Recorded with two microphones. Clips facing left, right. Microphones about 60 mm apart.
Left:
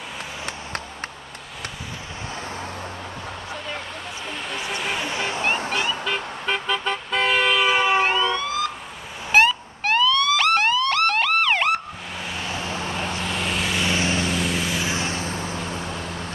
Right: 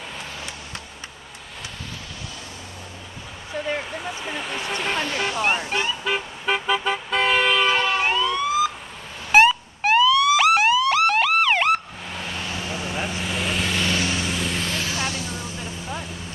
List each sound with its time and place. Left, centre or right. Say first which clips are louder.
4.0 s vehicle: right 2 dB; centre
5.0 s vehicle: right 1 dB; left
5.7 s vehicle: even; centre
8.3 s emergency vehicle: right 3 dB; centre
9.3 s police car: right 2 dB; centre
12.8 s vehicle: left 1 dB; centre
13.9 s vehicle: left 2 dB; left
14.2 s vehicle: left 2 dB; centre
14.8 s vehicle: left 1 dB; left